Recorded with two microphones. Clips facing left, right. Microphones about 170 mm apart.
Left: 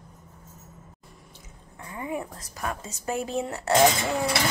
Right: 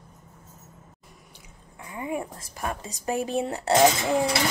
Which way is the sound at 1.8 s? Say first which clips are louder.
Right 1 dB; 20° right (ahead or behind).